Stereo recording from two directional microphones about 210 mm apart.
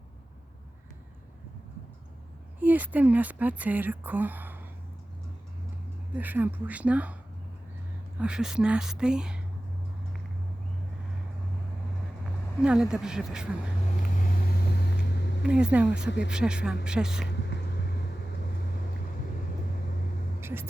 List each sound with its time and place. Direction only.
2.6 s speech: 5° right (ahead or behind)
6.1 s speech: 10° right (ahead or behind)
8.2 s speech: 5° right (ahead or behind)
12.6 s speech: 5° right (ahead or behind)
15.4 s speech: 5° right (ahead or behind)
16.0 s speech: 55° left (ahead or behind)
16.3 s speech: 5° right (ahead or behind)
20.4 s vehicle: 10° right (ahead or behind)